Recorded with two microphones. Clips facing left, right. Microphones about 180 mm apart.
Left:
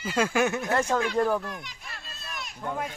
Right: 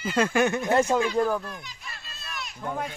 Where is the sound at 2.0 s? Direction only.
50° left (ahead or behind).